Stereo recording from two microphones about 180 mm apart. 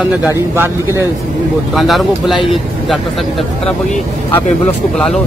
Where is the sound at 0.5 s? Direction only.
15° right (ahead or behind).